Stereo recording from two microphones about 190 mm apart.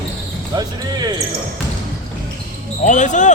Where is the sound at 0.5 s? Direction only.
20° right (ahead or behind).